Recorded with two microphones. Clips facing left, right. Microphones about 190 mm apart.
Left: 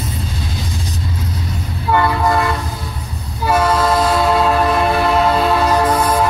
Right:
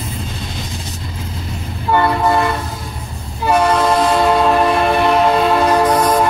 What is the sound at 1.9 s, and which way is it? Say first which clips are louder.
Train: right 1 dB; 25° right (ahead or behind).